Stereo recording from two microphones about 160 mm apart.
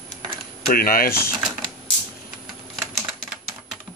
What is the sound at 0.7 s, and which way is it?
Speech, 65° left (ahead or behind).